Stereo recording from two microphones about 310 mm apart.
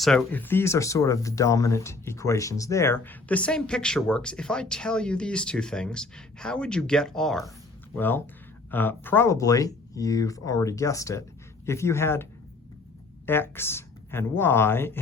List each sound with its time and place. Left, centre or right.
0.0 s speech: centre